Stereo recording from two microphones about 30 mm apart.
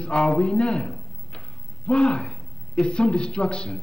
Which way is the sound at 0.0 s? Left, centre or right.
Left.